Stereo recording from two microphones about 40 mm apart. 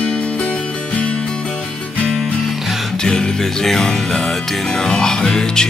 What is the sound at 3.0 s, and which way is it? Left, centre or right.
Music, centre.